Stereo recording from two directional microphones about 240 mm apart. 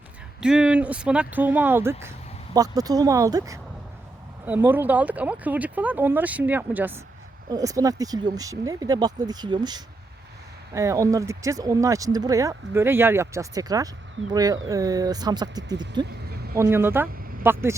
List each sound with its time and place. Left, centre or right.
0.4 s speech: centre